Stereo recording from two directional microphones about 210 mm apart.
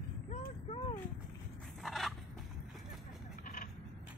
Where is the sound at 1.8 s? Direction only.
Centre (ahead or behind).